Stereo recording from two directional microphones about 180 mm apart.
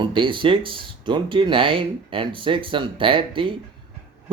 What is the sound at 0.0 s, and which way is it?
Speech, 25° right (ahead or behind).